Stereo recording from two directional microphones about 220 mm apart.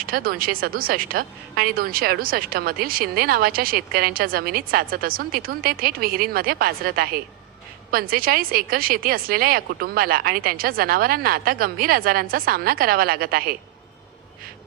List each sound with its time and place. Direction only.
0.0 s a woman's voice: 40° right (ahead or behind)